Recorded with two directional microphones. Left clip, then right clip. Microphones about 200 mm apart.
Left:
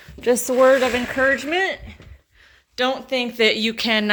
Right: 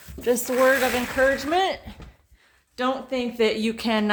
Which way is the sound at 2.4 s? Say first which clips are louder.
Left 6 dB; 5° left (ahead or behind).